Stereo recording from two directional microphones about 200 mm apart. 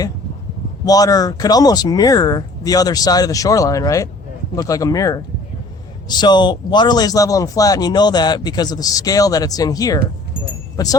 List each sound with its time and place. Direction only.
0.9 s speech: 20° left (ahead or behind)